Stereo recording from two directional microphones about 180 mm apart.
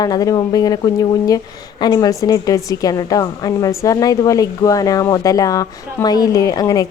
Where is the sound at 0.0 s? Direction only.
20° left (ahead or behind).